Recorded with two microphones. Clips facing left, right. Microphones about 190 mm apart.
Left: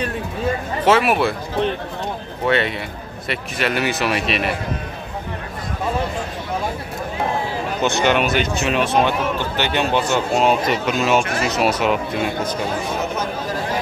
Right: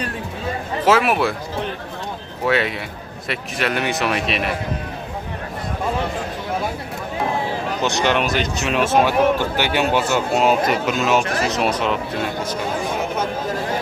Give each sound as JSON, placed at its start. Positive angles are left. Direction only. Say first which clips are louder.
{"t": 0.8, "sound": "speech", "louder": "left 1 dB", "side_deg": 0}
{"t": 2.4, "sound": "speech", "louder": "even", "side_deg": 0}
{"t": 7.8, "sound": "speech", "louder": "left 2 dB", "side_deg": 0}
{"t": 11.2, "sound": "speech", "louder": "even", "side_deg": -35}
{"t": 11.5, "sound": "speech", "louder": "left 5 dB", "side_deg": 5}